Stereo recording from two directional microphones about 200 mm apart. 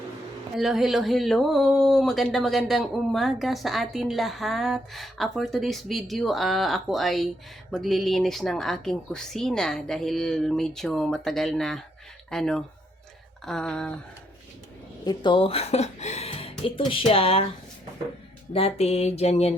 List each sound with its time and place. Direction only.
0.5 s speech: centre (ahead or behind)
15.0 s speech: 25° left (ahead or behind)
18.5 s a sound: 30° left (ahead or behind)